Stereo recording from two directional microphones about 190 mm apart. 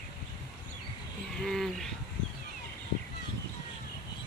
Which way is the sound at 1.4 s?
Centre (ahead or behind).